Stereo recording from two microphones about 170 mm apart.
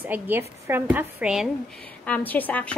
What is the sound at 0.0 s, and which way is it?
A woman's voice, 10° right (ahead or behind).